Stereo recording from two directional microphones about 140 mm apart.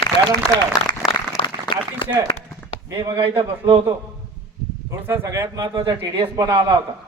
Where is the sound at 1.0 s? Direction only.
Centre (ahead or behind).